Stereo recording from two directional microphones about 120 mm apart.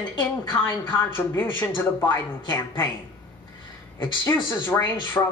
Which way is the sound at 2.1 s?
35° left (ahead or behind).